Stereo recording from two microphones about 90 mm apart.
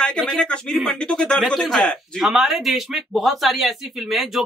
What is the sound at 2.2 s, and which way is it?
Speech, 5° right (ahead or behind).